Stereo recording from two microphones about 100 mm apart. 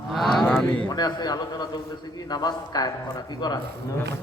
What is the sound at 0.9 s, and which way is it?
A man's voice, 45° left (ahead or behind).